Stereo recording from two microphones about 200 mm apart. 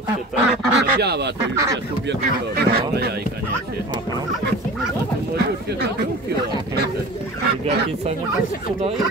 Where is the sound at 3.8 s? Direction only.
20° right (ahead or behind).